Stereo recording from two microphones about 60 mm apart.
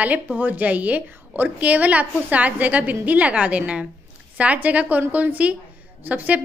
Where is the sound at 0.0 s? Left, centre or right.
Right.